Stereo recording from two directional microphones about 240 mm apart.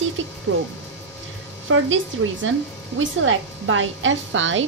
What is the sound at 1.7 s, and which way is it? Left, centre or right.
Speech, right.